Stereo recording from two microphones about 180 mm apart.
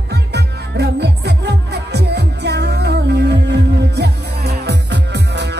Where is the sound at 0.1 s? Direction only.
65° right (ahead or behind).